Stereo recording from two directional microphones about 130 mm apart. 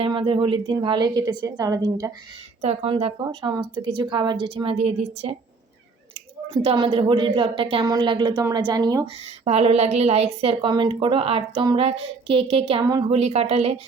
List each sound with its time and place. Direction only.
0.0 s a woman's voice: 40° right (ahead or behind)
2.6 s a woman's voice: 55° right (ahead or behind)
3.2 s a woman's voice: 30° right (ahead or behind); by 5.3 s 55° right (ahead or behind)
6.5 s a woman's voice: 55° right (ahead or behind); by 9.0 s 30° right (ahead or behind)
9.2 s a woman's voice: 50° right (ahead or behind)
12.8 s a woman's voice: 30° right (ahead or behind)
13.1 s a woman's voice: 55° right (ahead or behind)